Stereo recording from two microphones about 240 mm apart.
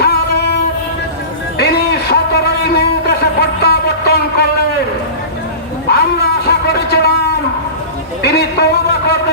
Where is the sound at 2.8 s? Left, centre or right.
Left.